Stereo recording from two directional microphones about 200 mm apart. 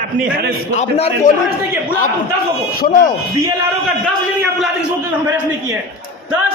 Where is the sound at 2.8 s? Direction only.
45° left (ahead or behind).